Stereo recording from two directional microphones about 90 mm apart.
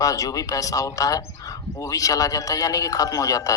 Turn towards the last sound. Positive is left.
turn(degrees=40)  # may be behind; listen again after turning